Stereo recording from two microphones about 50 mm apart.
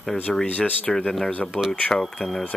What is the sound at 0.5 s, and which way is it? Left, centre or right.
Speech, left.